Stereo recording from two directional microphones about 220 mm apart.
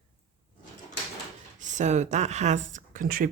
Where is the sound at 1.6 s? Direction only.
35° right (ahead or behind).